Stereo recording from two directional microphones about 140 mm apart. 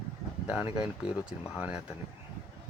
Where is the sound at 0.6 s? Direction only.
40° left (ahead or behind).